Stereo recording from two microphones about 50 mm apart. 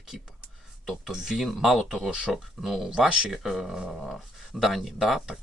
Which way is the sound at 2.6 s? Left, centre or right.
Centre.